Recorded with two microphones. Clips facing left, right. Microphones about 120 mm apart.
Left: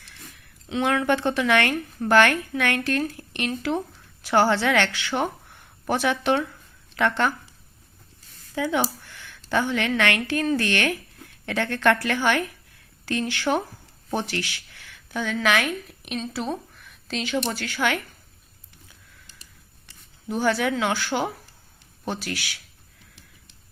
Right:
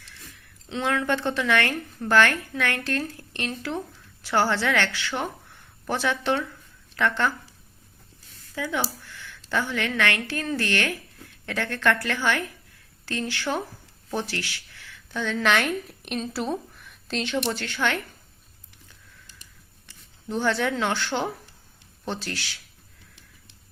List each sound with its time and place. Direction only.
0.7 s a woman's voice: 15° left (ahead or behind)
8.5 s a woman's voice: 20° left (ahead or behind)
20.2 s a woman's voice: 10° left (ahead or behind)